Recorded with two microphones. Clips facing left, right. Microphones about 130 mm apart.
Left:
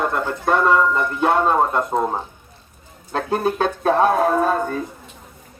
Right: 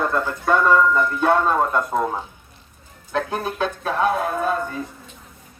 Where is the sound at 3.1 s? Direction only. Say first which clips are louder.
Left 4 dB; 35° left (ahead or behind).